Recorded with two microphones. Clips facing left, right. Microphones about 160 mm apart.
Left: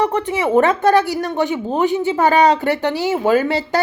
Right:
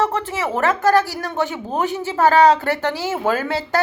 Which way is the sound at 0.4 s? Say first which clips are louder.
Left 4 dB; 25° left (ahead or behind).